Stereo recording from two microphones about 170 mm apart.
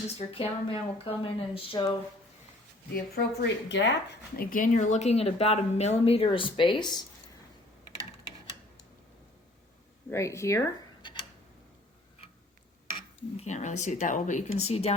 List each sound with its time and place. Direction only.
0.2 s speech: 35° left (ahead or behind)
2.9 s speech: 80° left; by 7.0 s 25° left (ahead or behind)
10.1 s speech: 15° left (ahead or behind)
13.3 s speech: 40° left (ahead or behind)